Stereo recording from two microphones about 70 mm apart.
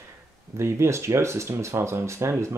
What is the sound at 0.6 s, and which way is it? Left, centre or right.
Speech, right.